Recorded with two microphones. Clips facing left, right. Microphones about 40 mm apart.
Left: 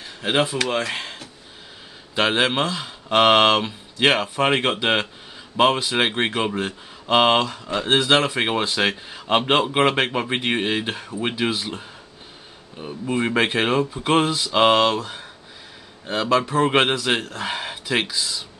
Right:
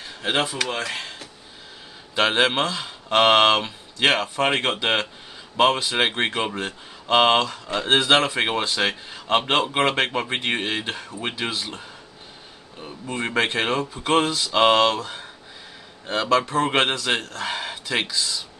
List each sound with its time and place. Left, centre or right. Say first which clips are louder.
0.0 s speech: left 2 dB; centre
0.7 s speech: left 3 dB; centre
2.1 s speech: even; centre